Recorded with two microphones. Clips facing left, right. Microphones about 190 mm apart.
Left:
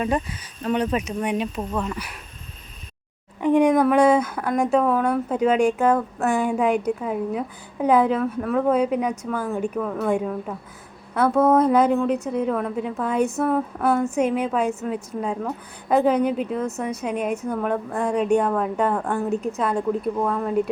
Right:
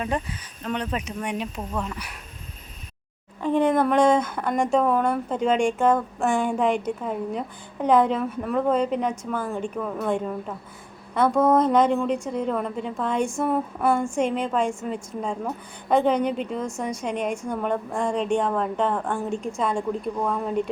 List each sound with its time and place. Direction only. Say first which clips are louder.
0.6 s speech: left 6 dB; 10° left (ahead or behind)
3.4 s speech: left 4 dB; 15° left (ahead or behind)
13.3 s a woman's voice: left 2 dB; 5° right (ahead or behind)